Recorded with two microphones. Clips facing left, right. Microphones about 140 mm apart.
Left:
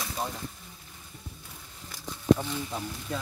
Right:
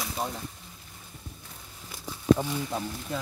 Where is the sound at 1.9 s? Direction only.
15° right (ahead or behind).